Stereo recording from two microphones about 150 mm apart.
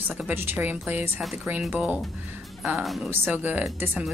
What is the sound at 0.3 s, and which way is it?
A woman's voice, 15° right (ahead or behind).